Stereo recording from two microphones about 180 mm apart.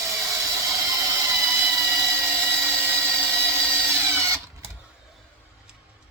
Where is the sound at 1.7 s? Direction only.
15° right (ahead or behind).